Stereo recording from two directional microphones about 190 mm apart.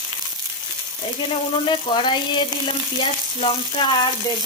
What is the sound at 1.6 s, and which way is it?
Speech, 25° left (ahead or behind).